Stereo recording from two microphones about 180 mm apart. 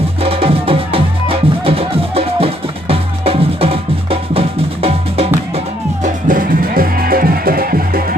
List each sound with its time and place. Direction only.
0.2 s music: 30° right (ahead or behind)
6.0 s music: 50° right (ahead or behind)